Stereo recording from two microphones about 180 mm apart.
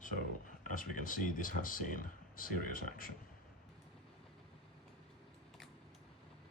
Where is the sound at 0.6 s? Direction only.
50° left (ahead or behind).